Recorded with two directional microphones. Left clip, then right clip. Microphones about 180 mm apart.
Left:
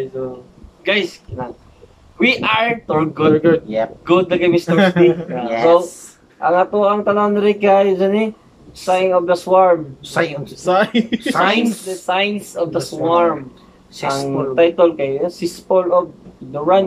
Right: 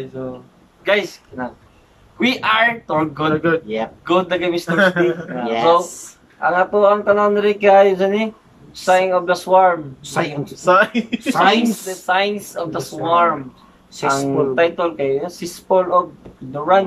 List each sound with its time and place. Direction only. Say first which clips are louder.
0.8 s speech: even; 5° left (ahead or behind)
3.3 s speech: left 3 dB; 20° left (ahead or behind)
3.6 s speech: left 4 dB; 10° right (ahead or behind)
4.0 s speech: left 2 dB; centre (ahead or behind)
4.7 s speech: right 3 dB; 20° left (ahead or behind)
6.4 s speech: even; centre (ahead or behind)
10.1 s speech: left 2 dB; 10° right (ahead or behind)
10.6 s speech: right 1 dB; 20° left (ahead or behind)
11.3 s speech: right 2 dB; 5° left (ahead or behind)